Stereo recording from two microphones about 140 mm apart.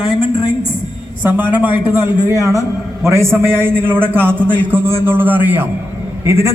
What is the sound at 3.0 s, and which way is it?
A man's voice, 20° right (ahead or behind).